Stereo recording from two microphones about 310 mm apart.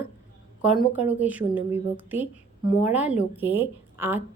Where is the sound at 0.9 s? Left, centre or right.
Centre.